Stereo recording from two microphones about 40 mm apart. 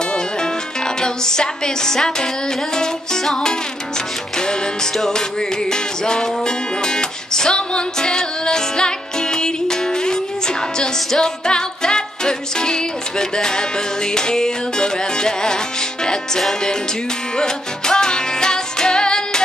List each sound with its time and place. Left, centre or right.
1.0 s music: centre
4.9 s music: centre